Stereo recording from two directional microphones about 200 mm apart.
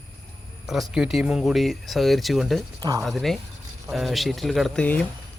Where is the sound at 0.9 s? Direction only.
Centre (ahead or behind).